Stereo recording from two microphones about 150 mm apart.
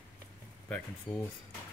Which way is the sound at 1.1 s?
30° left (ahead or behind).